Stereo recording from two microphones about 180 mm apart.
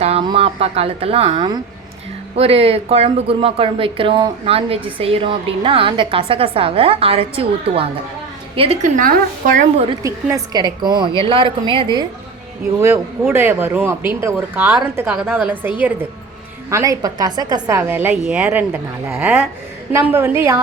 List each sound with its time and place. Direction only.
0.0 s a woman's voice: 30° right (ahead or behind)
9.0 s a woman's voice: 50° right (ahead or behind)
10.0 s a woman's voice: 15° right (ahead or behind)
12.8 s a woman's voice: 15° right (ahead or behind)